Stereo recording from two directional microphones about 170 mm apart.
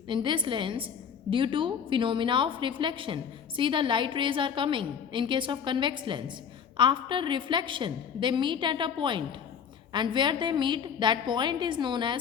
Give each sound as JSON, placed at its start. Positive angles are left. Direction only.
{"t": 0.1, "sound": "a woman's voice", "side_deg": -30}